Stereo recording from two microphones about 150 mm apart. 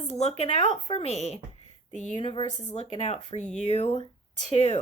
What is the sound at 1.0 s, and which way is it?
Speech, 45° left (ahead or behind).